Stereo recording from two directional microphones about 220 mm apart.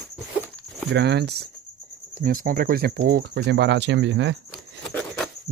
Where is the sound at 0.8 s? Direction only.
50° right (ahead or behind).